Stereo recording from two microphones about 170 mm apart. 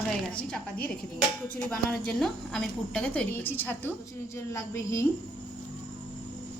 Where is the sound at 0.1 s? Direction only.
5° left (ahead or behind).